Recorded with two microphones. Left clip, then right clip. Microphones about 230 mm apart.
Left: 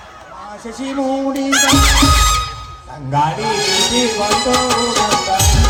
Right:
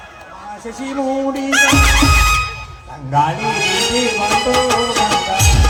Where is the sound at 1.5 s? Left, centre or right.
Left.